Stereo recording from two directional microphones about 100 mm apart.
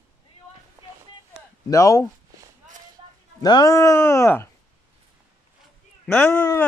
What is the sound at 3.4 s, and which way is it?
Speech, 40° left (ahead or behind).